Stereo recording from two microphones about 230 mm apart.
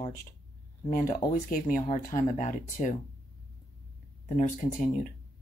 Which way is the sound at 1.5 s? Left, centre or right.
Left.